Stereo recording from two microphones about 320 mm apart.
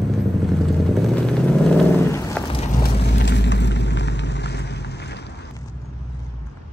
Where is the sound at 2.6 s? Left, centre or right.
Left.